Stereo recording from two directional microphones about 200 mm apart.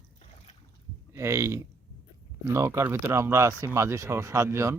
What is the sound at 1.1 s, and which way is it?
Speech, 15° right (ahead or behind).